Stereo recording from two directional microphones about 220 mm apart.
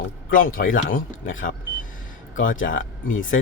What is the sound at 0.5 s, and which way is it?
Speech, 40° left (ahead or behind).